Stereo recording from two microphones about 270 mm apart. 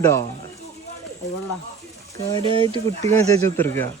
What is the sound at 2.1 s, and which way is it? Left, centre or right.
Speech, centre.